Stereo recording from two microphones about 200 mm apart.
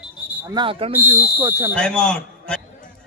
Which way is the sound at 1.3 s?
15° right (ahead or behind).